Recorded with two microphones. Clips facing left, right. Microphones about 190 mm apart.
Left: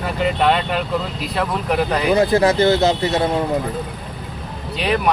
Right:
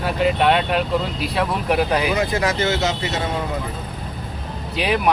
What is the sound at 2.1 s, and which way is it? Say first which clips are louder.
Speech: left 6 dB; 35° left (ahead or behind).